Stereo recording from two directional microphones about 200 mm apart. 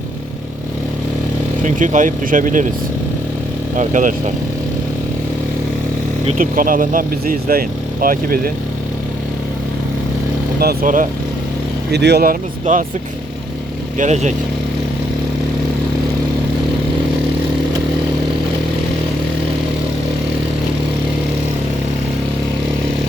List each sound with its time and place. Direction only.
1.6 s speech: 40° right (ahead or behind)
3.8 s speech: 40° right (ahead or behind)
6.2 s speech: 40° right (ahead or behind)
10.6 s speech: 45° right (ahead or behind)
11.9 s speech: 55° right (ahead or behind)
14.0 s speech: 35° right (ahead or behind)